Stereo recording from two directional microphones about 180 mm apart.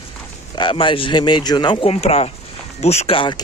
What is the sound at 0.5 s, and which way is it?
Speech, 25° left (ahead or behind).